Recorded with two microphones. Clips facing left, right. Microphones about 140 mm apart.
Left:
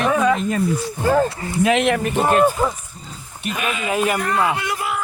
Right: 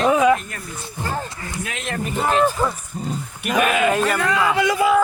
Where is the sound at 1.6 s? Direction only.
85° left.